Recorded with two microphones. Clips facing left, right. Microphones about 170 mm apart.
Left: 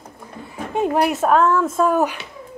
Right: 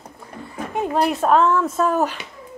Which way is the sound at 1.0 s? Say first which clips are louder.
Right 1 dB; 5° left (ahead or behind).